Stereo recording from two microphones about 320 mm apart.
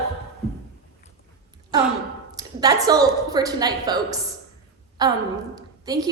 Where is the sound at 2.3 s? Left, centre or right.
Centre.